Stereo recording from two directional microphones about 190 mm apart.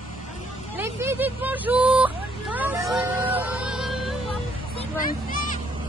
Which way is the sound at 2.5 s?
10° right (ahead or behind).